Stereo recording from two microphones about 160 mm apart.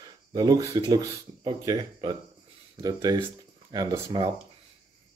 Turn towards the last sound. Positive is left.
turn(degrees=-25)  # may be behind; listen again after turning